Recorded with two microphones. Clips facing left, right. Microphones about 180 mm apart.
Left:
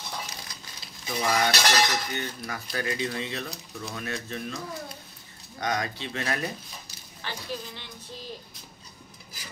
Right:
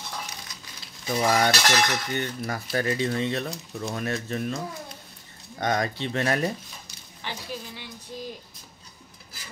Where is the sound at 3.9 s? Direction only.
45° right (ahead or behind).